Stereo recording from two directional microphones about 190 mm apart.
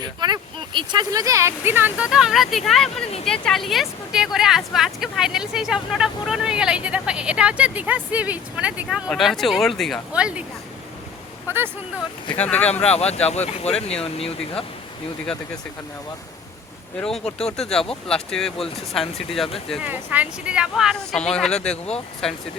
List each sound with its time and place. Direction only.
0.2 s speech: 25° right (ahead or behind); by 10.4 s 5° right (ahead or behind)
11.4 s speech: 10° right (ahead or behind)
12.3 s speech: 5° left (ahead or behind)
12.9 s speech: 35° left (ahead or behind)
17.3 s speech: 5° left (ahead or behind)
19.7 s speech: 10° right (ahead or behind)